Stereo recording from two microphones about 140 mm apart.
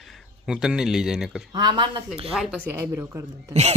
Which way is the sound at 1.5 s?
30° right (ahead or behind).